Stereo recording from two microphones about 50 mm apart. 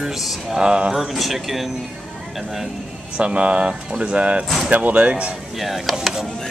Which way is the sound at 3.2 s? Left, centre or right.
Right.